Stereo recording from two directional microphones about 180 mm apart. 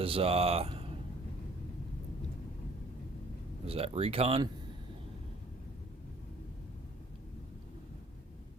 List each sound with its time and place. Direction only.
0.0 s speech: 30° right (ahead or behind)
3.7 s speech: 35° right (ahead or behind)